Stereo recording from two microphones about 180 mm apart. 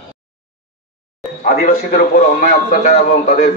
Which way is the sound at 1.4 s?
50° left (ahead or behind).